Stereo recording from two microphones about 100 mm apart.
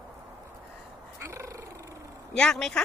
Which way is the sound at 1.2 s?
30° right (ahead or behind).